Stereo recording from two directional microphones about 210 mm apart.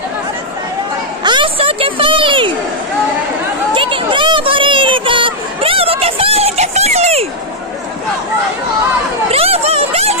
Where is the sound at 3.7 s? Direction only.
25° right (ahead or behind).